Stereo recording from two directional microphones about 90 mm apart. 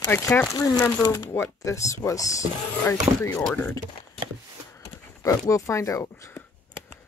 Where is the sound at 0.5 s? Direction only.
45° left (ahead or behind).